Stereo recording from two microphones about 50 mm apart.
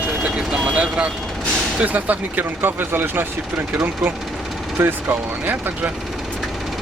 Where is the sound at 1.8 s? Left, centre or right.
Right.